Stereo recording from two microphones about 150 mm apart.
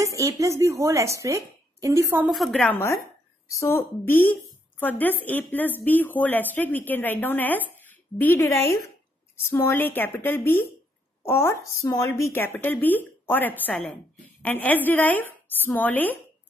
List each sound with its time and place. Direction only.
0.0 s a woman's voice: 20° right (ahead or behind)
2.2 s a woman's voice: centre (ahead or behind)